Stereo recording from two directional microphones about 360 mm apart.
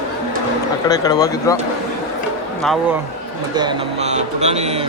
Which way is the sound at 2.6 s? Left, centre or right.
Centre.